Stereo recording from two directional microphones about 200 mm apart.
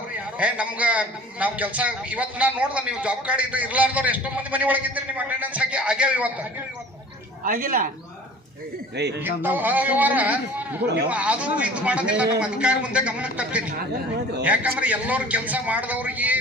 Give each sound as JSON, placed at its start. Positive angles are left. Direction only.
{"t": 0.3, "sound": "a man's voice", "side_deg": -5}
{"t": 7.4, "sound": "speech", "side_deg": -45}
{"t": 9.2, "sound": "a man's voice", "side_deg": -10}